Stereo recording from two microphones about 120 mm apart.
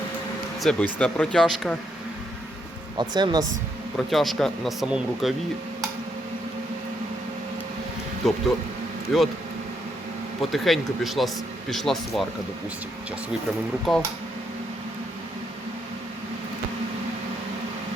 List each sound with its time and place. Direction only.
0.6 s speech: 5° left (ahead or behind)
3.0 s speech: 35° right (ahead or behind)
3.9 s speech: centre (ahead or behind)
8.2 s speech: centre (ahead or behind)
10.5 s speech: centre (ahead or behind)
13.9 s speech: centre (ahead or behind)